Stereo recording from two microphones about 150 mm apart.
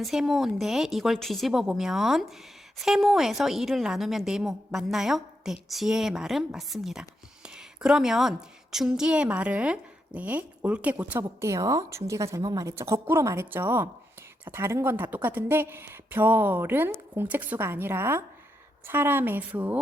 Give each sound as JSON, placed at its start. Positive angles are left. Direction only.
{"t": 0.0, "sound": "a woman's voice", "side_deg": 0}